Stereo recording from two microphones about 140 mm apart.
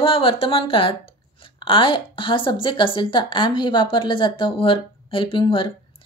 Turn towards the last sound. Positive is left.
turn(degrees=40)  # may be behind; listen again after turning